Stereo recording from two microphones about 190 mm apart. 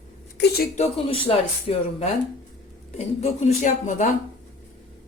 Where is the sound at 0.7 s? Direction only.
30° left (ahead or behind).